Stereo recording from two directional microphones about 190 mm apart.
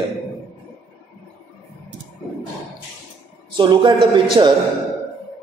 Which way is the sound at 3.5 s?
25° right (ahead or behind).